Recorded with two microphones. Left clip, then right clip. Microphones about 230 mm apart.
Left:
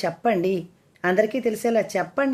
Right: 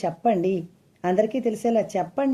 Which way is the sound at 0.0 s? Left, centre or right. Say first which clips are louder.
Even; left.